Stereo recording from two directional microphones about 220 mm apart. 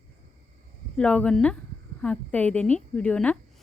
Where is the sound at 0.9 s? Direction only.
5° left (ahead or behind).